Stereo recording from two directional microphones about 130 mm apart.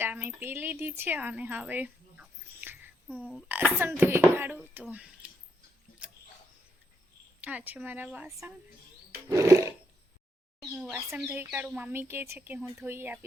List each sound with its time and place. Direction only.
0.0 s speech: 15° right (ahead or behind)
3.1 s speech: 10° left (ahead or behind)
3.5 s speech: 15° right (ahead or behind)
7.4 s speech: 10° right (ahead or behind)
9.1 s roar: 25° right (ahead or behind)
10.8 s speech: 10° right (ahead or behind)